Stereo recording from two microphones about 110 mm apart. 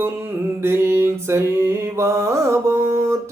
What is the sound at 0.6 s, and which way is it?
Mantra, 25° right (ahead or behind).